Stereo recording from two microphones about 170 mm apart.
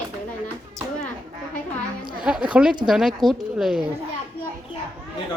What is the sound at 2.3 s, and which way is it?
A woman's voice, 5° right (ahead or behind).